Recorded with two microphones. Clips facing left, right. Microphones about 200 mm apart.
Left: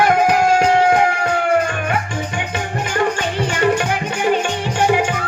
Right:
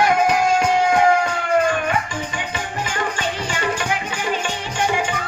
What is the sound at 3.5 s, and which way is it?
Music, 60° left (ahead or behind).